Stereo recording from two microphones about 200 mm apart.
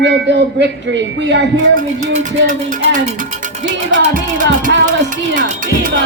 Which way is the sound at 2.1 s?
40° right (ahead or behind).